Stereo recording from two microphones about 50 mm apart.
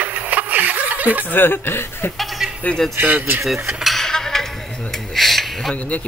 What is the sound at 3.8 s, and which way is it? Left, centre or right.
Cutlery, centre.